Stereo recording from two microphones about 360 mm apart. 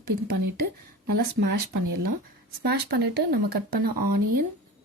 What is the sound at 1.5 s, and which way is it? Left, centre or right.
Speech, right.